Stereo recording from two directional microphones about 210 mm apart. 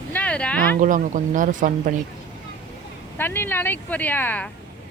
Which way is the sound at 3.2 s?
10° left (ahead or behind).